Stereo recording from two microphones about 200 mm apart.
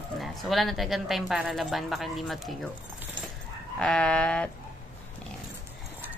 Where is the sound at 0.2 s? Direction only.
Centre (ahead or behind).